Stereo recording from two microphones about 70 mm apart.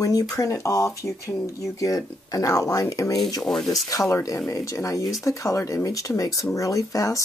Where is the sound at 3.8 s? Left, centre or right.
Left.